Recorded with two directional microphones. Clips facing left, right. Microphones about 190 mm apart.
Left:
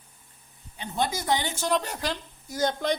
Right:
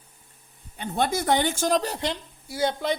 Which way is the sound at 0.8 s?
55° right (ahead or behind).